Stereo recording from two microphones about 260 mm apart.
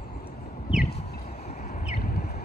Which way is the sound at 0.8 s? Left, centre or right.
Left.